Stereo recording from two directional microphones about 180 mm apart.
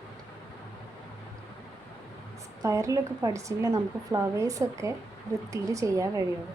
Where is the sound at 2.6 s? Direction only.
15° right (ahead or behind).